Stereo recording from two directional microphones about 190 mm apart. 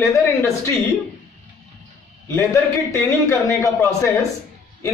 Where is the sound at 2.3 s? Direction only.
15° left (ahead or behind).